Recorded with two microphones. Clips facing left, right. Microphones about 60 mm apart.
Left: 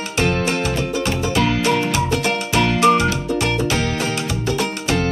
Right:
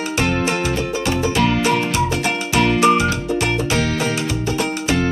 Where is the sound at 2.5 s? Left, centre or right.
Centre.